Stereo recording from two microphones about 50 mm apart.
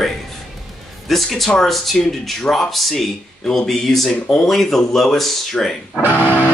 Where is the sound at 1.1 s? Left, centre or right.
Centre.